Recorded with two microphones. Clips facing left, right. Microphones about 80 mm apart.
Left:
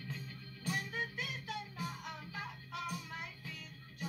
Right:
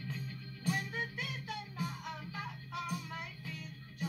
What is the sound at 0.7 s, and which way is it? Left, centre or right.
Music, centre.